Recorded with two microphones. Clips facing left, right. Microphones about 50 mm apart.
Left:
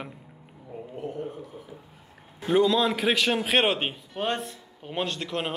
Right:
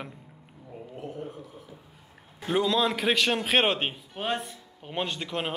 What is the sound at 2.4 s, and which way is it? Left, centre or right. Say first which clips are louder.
A man's voice: left 3 dB; centre.